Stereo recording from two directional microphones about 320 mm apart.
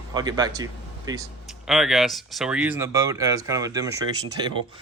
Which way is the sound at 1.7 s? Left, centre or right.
Centre.